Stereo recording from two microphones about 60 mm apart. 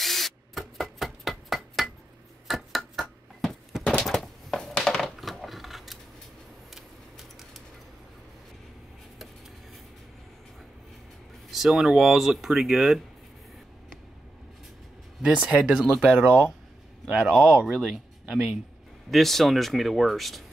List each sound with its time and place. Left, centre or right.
0.0 s rub: centre
2.4 s a sound: centre
4.0 s coin: centre
6.7 s a sound: centre
11.5 s speech: centre
15.2 s speech: centre